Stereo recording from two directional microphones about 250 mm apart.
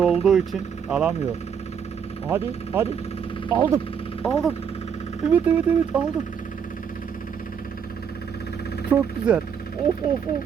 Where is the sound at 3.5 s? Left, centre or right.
Centre.